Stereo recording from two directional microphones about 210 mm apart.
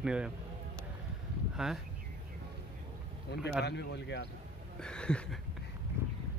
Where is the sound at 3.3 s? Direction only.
55° left (ahead or behind).